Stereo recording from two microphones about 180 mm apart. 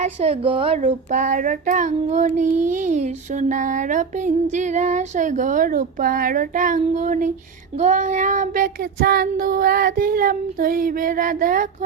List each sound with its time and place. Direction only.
0.0 s a woman's voice: 35° right (ahead or behind)
0.9 s child singing: 45° right (ahead or behind)